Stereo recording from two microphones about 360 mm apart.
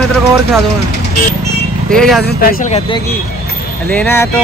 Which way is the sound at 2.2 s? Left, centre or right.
Left.